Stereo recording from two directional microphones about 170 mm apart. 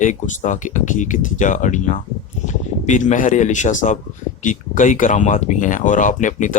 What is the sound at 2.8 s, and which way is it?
Speech, 45° left (ahead or behind).